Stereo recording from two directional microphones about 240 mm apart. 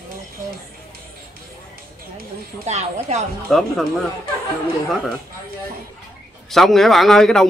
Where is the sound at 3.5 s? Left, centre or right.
Centre.